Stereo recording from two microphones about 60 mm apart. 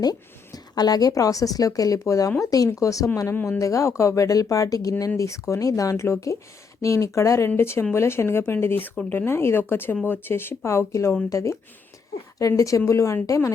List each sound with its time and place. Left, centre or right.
0.0 s a woman's voice: left
2.4 s a woman's voice: left
2.7 s speech: left
7.5 s speech: left
9.2 s speech: left